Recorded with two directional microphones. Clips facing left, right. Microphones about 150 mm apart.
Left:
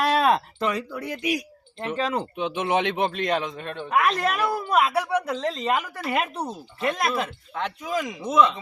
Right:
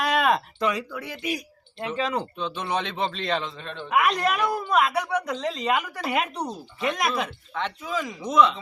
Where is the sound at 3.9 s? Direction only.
Centre (ahead or behind).